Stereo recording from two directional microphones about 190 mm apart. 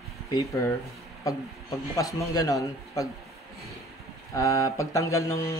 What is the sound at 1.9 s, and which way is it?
Speech, 15° left (ahead or behind).